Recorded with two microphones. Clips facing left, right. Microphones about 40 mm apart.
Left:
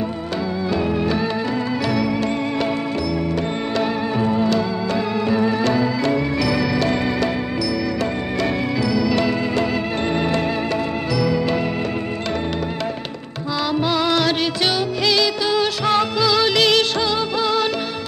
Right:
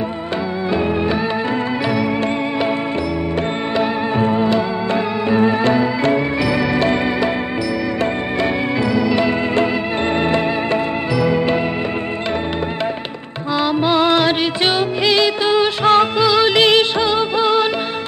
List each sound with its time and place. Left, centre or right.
4.2 s music: right
8.8 s music: right
11.1 s music: right
13.8 s music: right
15.0 s music of bollywood: right
16.3 s music: right